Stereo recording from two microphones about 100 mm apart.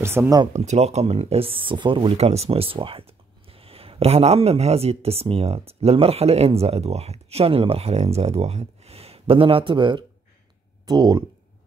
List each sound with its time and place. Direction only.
0.0 s speech: 25° right (ahead or behind)
0.5 s speech: 90° right; by 2.1 s 55° right (ahead or behind)
2.1 s speech: 90° right; by 11.2 s 45° right (ahead or behind)